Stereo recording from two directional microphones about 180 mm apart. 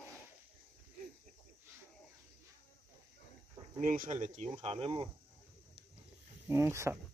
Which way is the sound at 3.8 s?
50° right (ahead or behind).